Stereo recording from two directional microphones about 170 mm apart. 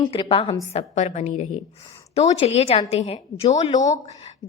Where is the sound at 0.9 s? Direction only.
45° left (ahead or behind).